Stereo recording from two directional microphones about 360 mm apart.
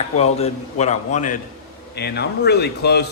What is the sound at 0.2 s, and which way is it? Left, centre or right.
A man's voice, centre.